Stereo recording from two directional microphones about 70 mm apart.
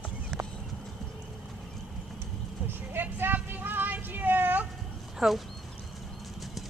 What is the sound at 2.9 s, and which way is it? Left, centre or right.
Vehicle, right.